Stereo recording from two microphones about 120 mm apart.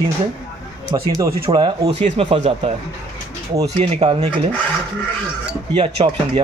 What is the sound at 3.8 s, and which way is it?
Speech, 55° right (ahead or behind).